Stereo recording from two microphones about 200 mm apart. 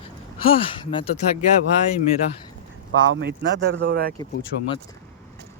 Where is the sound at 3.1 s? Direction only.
60° right (ahead or behind).